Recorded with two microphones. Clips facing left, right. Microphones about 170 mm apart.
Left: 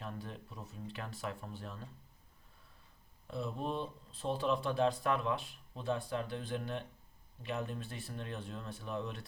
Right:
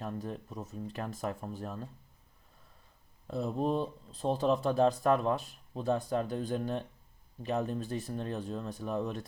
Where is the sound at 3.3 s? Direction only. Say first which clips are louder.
Right 7 dB; 40° right (ahead or behind).